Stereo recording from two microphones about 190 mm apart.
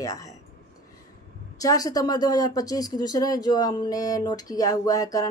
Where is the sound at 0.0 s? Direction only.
15° left (ahead or behind).